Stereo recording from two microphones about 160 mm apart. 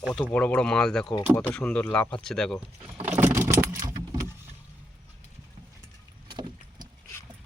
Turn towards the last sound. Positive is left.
turn(degrees=-30)  # may be behind; listen again after turning